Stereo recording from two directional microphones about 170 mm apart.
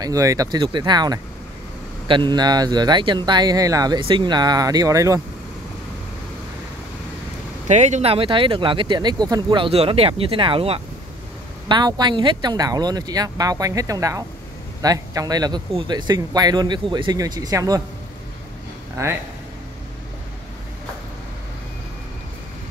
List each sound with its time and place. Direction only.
0.0 s speech: 20° right (ahead or behind)
7.6 s speech: 45° right (ahead or behind); by 17.8 s 20° right (ahead or behind)
19.0 s speech: 20° right (ahead or behind)